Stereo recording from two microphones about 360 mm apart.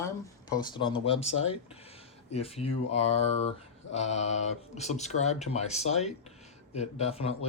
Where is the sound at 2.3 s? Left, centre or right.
Centre.